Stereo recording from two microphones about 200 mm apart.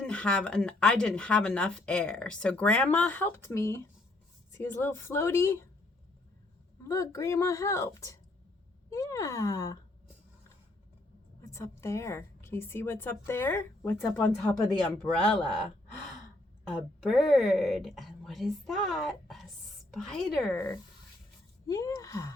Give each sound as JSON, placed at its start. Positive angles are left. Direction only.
{"t": 0.0, "sound": "speech", "side_deg": 5}
{"t": 6.8, "sound": "speech", "side_deg": 15}
{"t": 11.3, "sound": "a woman's voice", "side_deg": 15}
{"t": 16.6, "sound": "speech", "side_deg": 0}
{"t": 21.7, "sound": "speech", "side_deg": 15}